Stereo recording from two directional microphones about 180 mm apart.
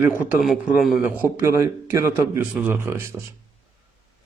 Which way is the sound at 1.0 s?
10° right (ahead or behind).